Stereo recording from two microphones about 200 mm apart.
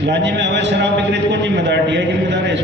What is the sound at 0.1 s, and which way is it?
A man's voice, 60° right (ahead or behind).